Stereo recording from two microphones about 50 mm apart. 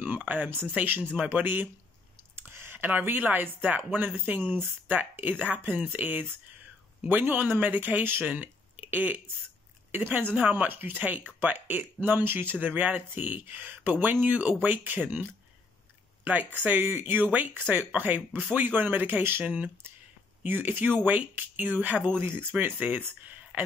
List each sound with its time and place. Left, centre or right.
0.0 s a sound: right
1.4 s speech: right
16.3 s speech: right
19.4 s speech: right
20.4 s speech: right